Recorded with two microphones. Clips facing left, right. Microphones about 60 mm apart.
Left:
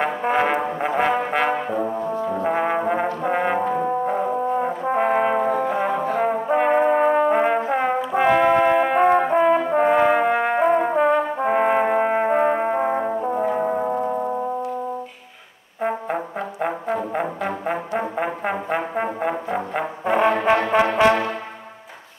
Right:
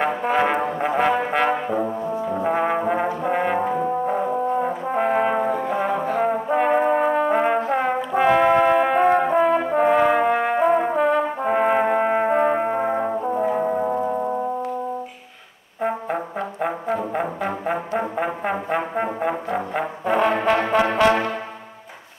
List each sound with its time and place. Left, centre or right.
0.2 s brass instrument: centre
15.8 s brass instrument: centre
20.2 s brass instrument: centre